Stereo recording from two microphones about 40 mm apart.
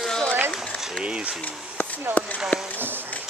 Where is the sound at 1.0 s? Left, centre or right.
Right.